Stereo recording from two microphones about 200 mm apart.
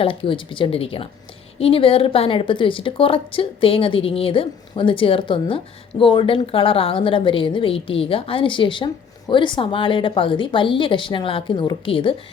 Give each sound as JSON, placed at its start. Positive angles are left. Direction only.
{"t": 0.0, "sound": "a woman's voice", "side_deg": 25}